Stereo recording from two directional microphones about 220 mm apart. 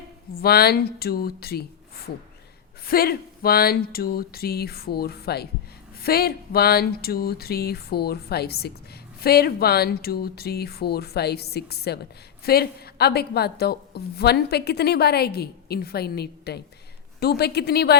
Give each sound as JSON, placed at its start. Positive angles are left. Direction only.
{"t": 0.4, "sound": "a woman's voice", "side_deg": 45}
{"t": 2.8, "sound": "a woman's voice", "side_deg": 45}